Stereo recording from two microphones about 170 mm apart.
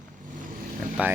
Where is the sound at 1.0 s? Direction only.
10° right (ahead or behind).